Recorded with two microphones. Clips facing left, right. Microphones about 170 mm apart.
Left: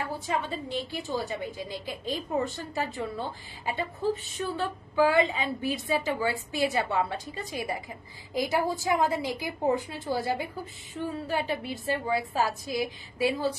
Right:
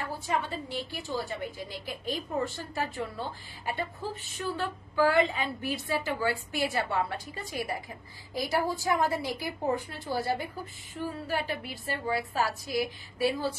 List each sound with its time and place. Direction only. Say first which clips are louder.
0.3 s a woman's voice: even; 20° left (ahead or behind)